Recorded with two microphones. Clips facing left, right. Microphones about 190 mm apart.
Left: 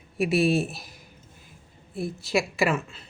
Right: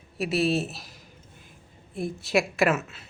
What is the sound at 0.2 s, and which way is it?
Speech, 35° right (ahead or behind).